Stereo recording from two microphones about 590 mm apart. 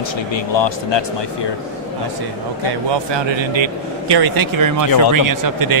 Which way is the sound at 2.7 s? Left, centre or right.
Right.